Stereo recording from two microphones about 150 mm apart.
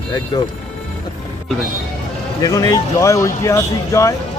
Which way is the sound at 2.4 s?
25° left (ahead or behind).